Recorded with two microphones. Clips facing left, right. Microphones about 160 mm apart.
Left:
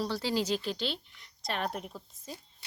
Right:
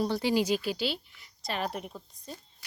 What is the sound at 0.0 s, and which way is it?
Speech, 15° right (ahead or behind).